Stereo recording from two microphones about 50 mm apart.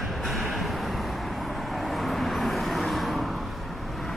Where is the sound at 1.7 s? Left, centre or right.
Centre.